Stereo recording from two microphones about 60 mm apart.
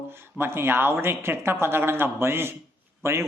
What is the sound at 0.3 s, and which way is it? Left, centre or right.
Speech, right.